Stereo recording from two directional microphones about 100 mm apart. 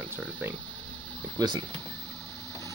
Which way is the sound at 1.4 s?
40° right (ahead or behind).